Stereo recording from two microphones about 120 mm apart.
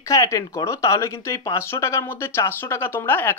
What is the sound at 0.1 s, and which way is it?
Speech, 25° left (ahead or behind).